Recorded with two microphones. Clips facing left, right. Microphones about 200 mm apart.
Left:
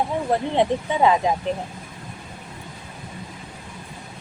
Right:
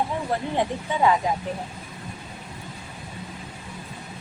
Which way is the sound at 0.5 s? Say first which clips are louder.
Left 5 dB; 20° left (ahead or behind).